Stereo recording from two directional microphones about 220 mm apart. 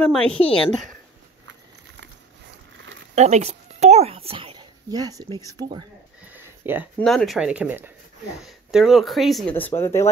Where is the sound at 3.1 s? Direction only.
30° right (ahead or behind).